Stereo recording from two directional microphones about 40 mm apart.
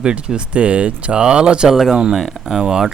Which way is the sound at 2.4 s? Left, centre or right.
Centre.